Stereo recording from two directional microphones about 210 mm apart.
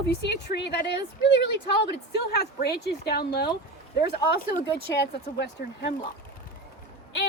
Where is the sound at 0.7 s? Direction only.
50° left (ahead or behind).